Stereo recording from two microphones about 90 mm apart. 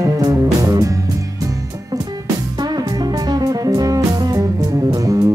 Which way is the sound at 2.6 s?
50° right (ahead or behind).